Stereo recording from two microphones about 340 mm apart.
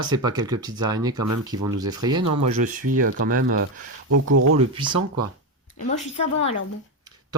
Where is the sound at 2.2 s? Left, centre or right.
Right.